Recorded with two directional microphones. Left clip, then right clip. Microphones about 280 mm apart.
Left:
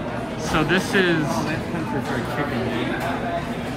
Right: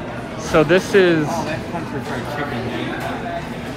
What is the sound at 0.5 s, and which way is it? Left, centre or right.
Speech, centre.